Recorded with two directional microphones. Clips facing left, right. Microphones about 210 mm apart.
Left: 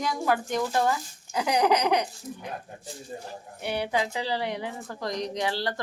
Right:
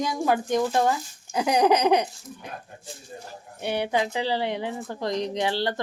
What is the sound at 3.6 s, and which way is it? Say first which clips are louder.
A woman's voice: right 3 dB; 25° right (ahead or behind).